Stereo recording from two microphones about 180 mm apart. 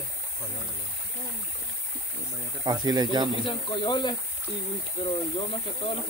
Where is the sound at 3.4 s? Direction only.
25° left (ahead or behind).